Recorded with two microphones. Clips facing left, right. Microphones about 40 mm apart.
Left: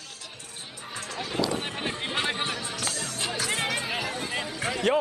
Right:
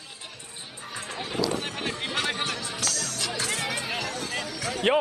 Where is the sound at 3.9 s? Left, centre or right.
Centre.